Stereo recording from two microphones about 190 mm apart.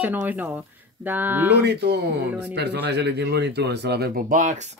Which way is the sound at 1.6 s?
65° right (ahead or behind).